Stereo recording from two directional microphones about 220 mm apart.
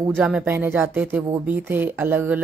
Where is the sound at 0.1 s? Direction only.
5° right (ahead or behind).